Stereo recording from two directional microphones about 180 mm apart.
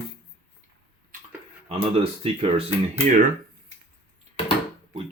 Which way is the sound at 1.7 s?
35° right (ahead or behind).